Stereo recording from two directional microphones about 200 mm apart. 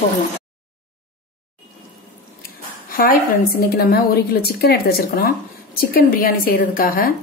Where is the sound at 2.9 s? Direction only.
45° left (ahead or behind).